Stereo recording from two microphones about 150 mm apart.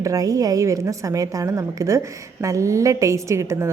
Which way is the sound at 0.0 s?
25° right (ahead or behind).